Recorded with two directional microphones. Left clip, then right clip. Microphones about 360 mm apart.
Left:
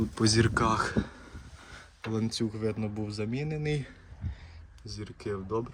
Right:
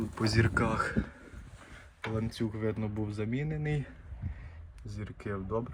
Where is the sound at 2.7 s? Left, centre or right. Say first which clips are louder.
Left 2 dB; centre.